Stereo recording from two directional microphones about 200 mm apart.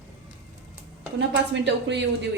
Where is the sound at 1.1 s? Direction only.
60° right (ahead or behind).